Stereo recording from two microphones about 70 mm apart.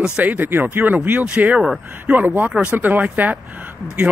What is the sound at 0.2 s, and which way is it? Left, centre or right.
Speech, right.